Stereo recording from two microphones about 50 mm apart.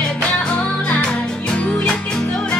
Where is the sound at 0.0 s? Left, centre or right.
Centre.